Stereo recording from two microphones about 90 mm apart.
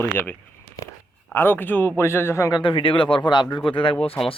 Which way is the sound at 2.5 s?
60° left (ahead or behind).